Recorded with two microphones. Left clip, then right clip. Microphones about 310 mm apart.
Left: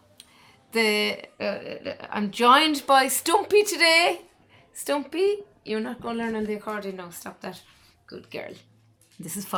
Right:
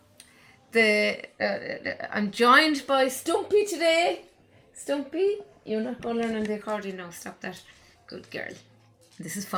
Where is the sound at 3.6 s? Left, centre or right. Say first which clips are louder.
Left 4 dB; left.